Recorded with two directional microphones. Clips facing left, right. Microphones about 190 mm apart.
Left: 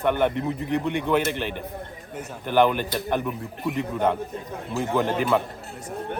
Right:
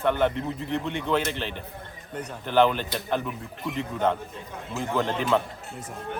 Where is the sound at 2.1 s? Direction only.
10° left (ahead or behind).